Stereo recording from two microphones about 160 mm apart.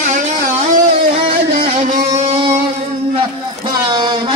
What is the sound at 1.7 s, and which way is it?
Music, 45° right (ahead or behind).